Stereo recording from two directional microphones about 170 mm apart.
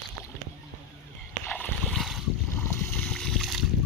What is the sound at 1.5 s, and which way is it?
Boat, 10° left (ahead or behind).